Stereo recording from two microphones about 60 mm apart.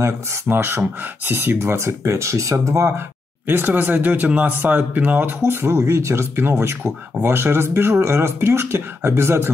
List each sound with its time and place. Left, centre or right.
0.0 s speech: right
1.6 s speech: right
3.4 s speech: right
5.5 s speech: right